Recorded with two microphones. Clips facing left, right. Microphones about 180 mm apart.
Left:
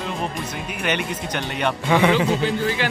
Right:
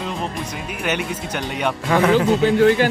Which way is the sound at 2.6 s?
50° right (ahead or behind).